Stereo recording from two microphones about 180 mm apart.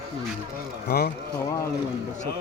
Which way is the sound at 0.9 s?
60° left (ahead or behind).